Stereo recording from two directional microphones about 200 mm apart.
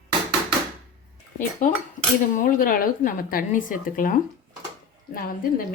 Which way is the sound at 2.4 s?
45° left (ahead or behind).